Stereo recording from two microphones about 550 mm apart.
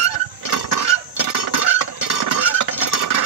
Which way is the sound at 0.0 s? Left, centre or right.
Left.